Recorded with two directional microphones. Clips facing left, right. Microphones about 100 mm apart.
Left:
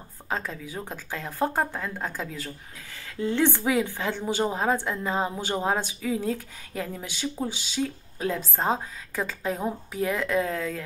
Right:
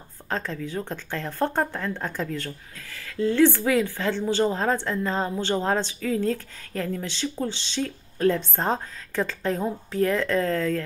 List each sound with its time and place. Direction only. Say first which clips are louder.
0.3 s a woman's voice: right 3 dB; 10° left (ahead or behind)
2.9 s a woman's voice: right 4 dB; 20° left (ahead or behind)